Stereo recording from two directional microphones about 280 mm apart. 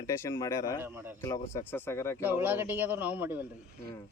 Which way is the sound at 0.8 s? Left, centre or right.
Centre.